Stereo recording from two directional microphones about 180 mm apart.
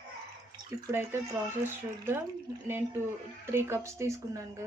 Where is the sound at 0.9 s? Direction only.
15° right (ahead or behind).